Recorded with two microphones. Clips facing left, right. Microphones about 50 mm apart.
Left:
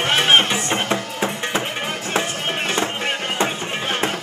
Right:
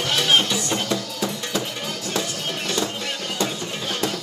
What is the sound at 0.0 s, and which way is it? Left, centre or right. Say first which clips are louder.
Music: left 4 dB; left.